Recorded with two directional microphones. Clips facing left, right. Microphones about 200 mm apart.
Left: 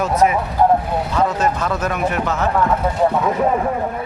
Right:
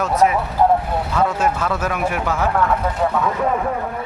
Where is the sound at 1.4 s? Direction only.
5° right (ahead or behind).